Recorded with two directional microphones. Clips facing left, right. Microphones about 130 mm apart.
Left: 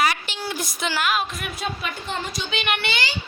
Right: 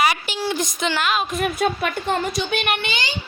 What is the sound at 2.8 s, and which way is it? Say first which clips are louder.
Speech: even; 20° right (ahead or behind).